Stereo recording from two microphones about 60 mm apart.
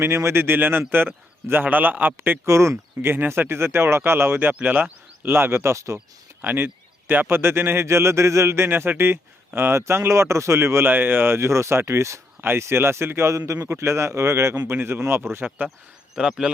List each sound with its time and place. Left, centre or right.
0.0 s a man's voice: right
2.5 s speech: right
5.7 s speech: right
6.4 s speech: right
14.7 s a man's voice: right
15.4 s speech: right
16.1 s speech: centre